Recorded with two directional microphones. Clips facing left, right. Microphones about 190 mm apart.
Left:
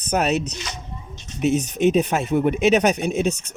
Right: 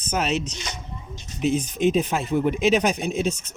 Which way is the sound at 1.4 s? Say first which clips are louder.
Left 3 dB; 65° left (ahead or behind).